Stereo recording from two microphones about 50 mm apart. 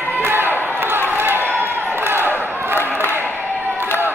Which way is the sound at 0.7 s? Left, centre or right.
Right.